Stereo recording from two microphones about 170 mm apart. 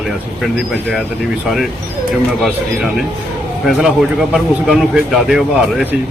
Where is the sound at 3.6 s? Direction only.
Centre (ahead or behind).